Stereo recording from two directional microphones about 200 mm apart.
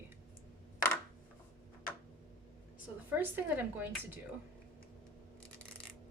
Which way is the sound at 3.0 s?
10° right (ahead or behind).